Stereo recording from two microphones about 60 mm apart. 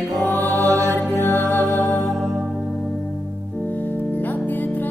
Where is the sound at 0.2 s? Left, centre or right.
Left.